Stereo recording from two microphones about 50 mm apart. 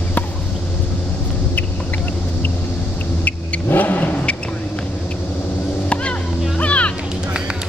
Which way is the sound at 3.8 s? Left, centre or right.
Left.